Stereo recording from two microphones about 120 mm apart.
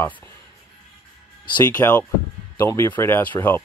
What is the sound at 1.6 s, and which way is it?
Speech, 15° left (ahead or behind).